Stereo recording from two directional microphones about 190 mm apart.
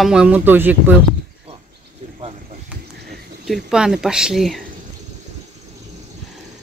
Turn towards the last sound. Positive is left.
turn(degrees=0)  # may be behind; listen again after turning